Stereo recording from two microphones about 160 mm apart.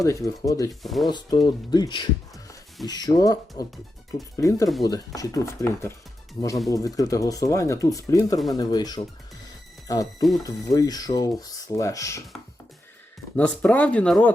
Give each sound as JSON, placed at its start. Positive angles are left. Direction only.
{"t": 0.0, "sound": "speech", "side_deg": 20}
{"t": 0.7, "sound": "speech", "side_deg": 0}
{"t": 1.1, "sound": "speech", "side_deg": 25}
{"t": 13.3, "sound": "speech", "side_deg": 10}